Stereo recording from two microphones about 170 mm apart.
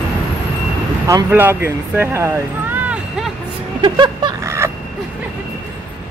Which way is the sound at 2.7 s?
10° right (ahead or behind).